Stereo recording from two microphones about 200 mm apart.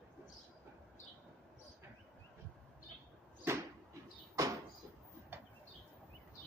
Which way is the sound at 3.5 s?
10° right (ahead or behind).